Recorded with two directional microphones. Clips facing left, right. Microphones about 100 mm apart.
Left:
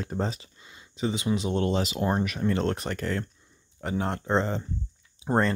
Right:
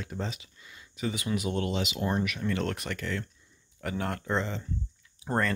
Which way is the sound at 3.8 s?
25° left (ahead or behind).